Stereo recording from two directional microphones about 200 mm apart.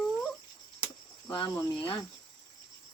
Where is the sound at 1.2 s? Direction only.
20° left (ahead or behind).